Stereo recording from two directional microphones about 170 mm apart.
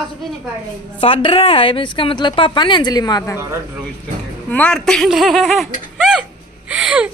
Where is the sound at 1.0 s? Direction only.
30° left (ahead or behind).